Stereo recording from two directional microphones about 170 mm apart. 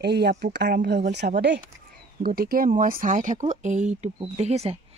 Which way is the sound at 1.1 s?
85° right.